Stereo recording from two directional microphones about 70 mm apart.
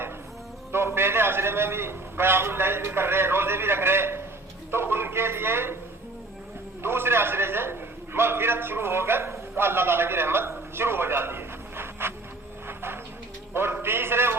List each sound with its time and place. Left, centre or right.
0.7 s a man's voice: right
6.8 s a man's voice: right
12.6 s a sound: right